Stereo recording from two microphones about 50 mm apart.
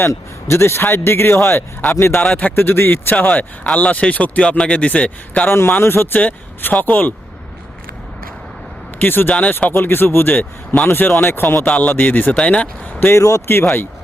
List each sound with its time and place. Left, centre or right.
0.0 s speech: left
5.5 s a man's voice: left
6.1 s speech: left
9.0 s a man's voice: left
11.6 s speech: left
12.4 s speech: left
13.1 s speech: left
13.5 s speech: left